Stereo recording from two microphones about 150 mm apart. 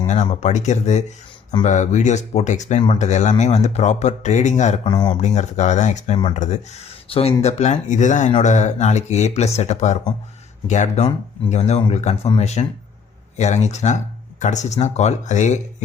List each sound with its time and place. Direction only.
0.1 s speech: 50° left (ahead or behind)
4.9 s speech: 25° left (ahead or behind)
5.1 s speech: 50° left (ahead or behind)